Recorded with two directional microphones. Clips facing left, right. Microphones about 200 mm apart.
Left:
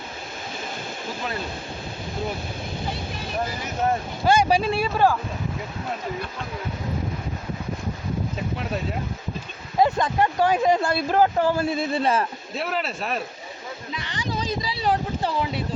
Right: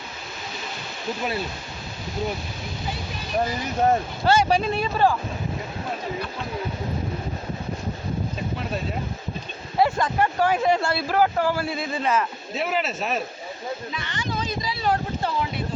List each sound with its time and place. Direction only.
4.3 s speech: 10° left (ahead or behind)
9.7 s speech: 20° left (ahead or behind)
11.9 s a man's voice: 35° left (ahead or behind)
12.5 s speech: centre (ahead or behind)
13.9 s speech: 35° left (ahead or behind)